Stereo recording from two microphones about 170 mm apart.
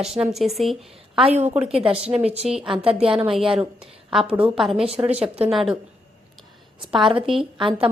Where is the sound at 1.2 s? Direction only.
40° right (ahead or behind).